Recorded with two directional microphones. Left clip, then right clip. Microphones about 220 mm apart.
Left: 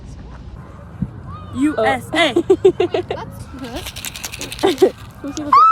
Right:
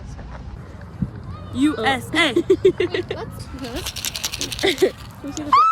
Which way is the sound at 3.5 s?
Centre (ahead or behind).